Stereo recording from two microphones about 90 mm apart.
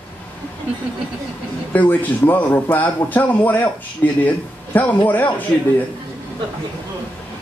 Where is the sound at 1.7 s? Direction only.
20° left (ahead or behind).